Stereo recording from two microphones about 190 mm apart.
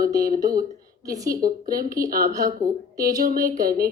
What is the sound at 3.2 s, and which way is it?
Speech, 45° right (ahead or behind).